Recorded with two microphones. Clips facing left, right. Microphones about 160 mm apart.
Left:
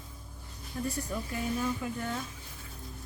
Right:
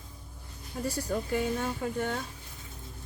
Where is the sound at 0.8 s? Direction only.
85° right.